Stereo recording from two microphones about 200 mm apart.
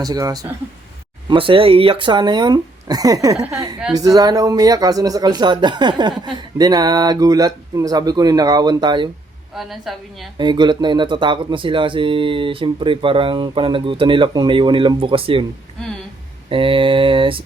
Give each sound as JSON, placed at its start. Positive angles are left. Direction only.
{"t": 0.0, "sound": "speech", "side_deg": -20}
{"t": 9.6, "sound": "a woman's voice", "side_deg": 0}
{"t": 10.3, "sound": "speech", "side_deg": -20}
{"t": 16.5, "sound": "speech", "side_deg": -25}